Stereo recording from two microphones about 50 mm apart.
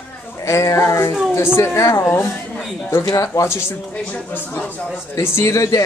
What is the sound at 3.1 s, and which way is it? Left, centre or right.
Speech, left.